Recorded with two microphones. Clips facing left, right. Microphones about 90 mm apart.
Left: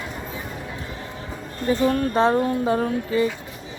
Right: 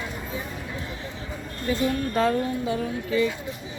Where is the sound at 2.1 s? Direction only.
35° left (ahead or behind).